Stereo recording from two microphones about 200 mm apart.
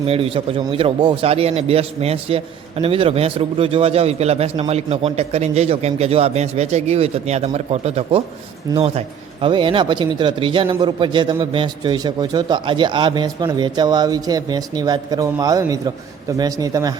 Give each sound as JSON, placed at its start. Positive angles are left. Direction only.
{"t": 0.0, "sound": "speech", "side_deg": -30}